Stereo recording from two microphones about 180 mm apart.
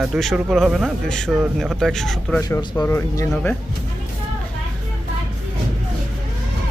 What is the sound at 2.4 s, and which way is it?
Speech, 15° left (ahead or behind).